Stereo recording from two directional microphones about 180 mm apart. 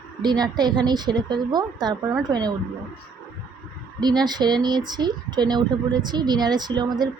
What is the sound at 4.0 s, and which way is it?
Speech, 25° right (ahead or behind).